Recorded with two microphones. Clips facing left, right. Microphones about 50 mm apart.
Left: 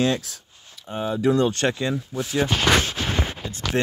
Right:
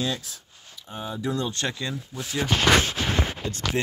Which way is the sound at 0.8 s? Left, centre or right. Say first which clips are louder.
Left 8 dB; left.